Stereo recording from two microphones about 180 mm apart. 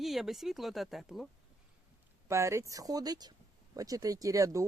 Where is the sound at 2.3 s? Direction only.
15° right (ahead or behind).